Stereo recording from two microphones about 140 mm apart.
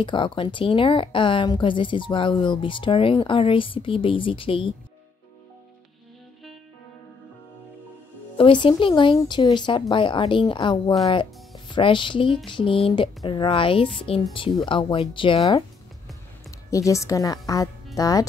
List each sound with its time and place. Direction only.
0.0 s speech: 35° left (ahead or behind)
8.4 s speech: 40° left (ahead or behind)
16.4 s a woman's voice: 20° left (ahead or behind)